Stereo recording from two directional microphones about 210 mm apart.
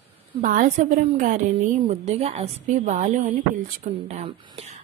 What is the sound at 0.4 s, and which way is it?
A woman's voice, 35° right (ahead or behind).